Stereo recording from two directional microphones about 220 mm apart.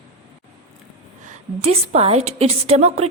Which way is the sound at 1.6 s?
25° right (ahead or behind).